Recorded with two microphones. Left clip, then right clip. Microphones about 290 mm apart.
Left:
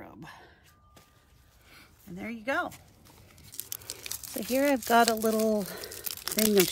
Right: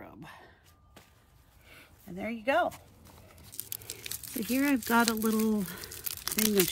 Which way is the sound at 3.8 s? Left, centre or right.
Centre.